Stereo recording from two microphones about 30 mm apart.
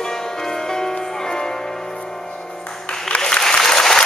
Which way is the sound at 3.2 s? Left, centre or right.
Centre.